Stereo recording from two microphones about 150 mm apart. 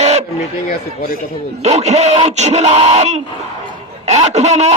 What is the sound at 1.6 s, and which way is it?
Speech, 45° right (ahead or behind).